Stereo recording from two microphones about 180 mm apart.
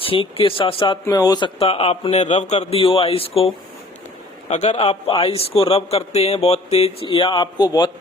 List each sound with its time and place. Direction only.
0.0 s a man's voice: 30° left (ahead or behind)